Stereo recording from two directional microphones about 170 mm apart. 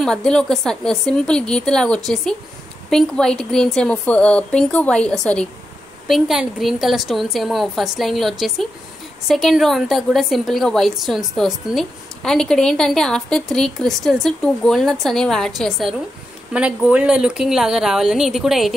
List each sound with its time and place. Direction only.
0.0 s a woman's voice: 5° left (ahead or behind)